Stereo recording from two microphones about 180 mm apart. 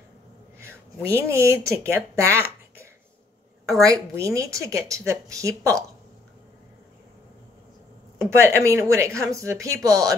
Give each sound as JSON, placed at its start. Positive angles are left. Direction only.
{"t": 0.6, "sound": "speech", "side_deg": -15}
{"t": 8.2, "sound": "speech", "side_deg": -15}